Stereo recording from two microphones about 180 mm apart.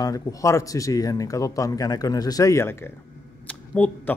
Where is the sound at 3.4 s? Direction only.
10° left (ahead or behind).